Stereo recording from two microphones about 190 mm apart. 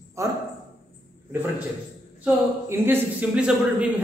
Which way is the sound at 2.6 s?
10° right (ahead or behind).